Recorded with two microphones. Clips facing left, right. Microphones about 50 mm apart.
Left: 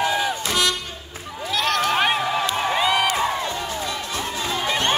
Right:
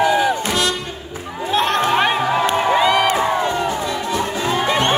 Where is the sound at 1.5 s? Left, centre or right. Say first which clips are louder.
Right 4 dB; right.